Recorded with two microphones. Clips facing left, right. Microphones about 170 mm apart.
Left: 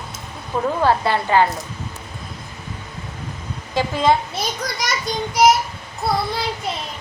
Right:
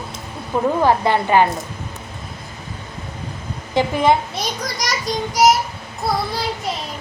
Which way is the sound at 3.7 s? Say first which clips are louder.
Right 2 dB; 15° right (ahead or behind).